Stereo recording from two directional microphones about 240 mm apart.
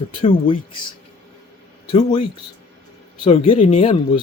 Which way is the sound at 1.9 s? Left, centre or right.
Left.